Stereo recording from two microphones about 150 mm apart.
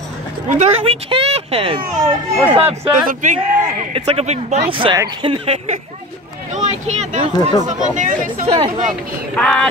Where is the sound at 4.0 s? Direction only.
45° right (ahead or behind).